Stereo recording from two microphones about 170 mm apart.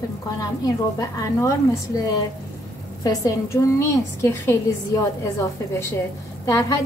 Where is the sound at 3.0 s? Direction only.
20° left (ahead or behind).